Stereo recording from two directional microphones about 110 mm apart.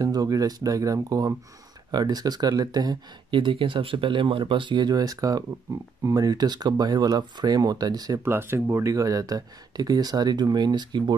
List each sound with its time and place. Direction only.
0.0 s speech: 35° right (ahead or behind)
8.2 s speech: 20° right (ahead or behind); by 11.1 s 40° right (ahead or behind)